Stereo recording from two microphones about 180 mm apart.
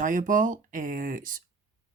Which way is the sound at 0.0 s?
45° right (ahead or behind).